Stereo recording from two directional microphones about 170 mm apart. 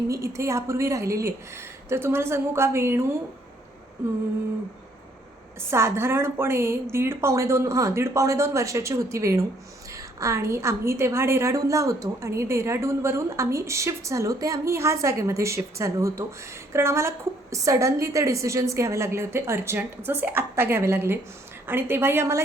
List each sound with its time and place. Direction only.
0.1 s a woman's voice: 15° right (ahead or behind)
5.5 s a woman's voice: 15° right (ahead or behind)